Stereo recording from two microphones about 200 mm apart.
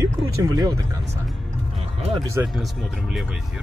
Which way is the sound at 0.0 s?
15° right (ahead or behind).